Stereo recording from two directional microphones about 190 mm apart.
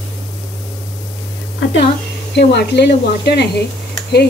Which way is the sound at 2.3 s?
60° left (ahead or behind).